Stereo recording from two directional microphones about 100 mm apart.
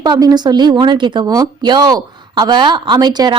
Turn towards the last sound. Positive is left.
turn(degrees=-45)  # may be behind; listen again after turning